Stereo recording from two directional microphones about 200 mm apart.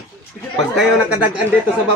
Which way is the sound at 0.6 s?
Centre (ahead or behind).